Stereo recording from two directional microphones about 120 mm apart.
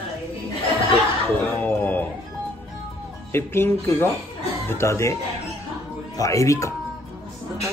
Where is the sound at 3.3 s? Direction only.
20° left (ahead or behind).